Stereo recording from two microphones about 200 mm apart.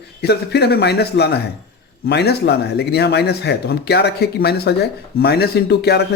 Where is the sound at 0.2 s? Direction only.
55° left (ahead or behind).